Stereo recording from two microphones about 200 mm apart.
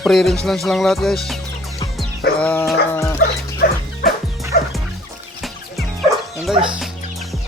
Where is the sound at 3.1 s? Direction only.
50° left (ahead or behind).